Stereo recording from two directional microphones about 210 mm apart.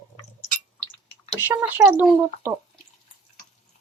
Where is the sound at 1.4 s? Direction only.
10° right (ahead or behind).